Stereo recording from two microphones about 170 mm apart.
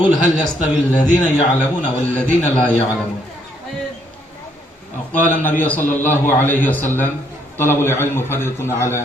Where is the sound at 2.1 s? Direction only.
10° left (ahead or behind).